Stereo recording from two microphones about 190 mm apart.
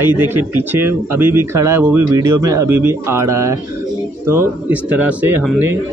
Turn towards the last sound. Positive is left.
turn(degrees=-10)  # may be behind; listen again after turning